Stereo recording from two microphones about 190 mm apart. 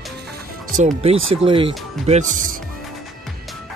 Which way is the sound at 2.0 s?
40° right (ahead or behind).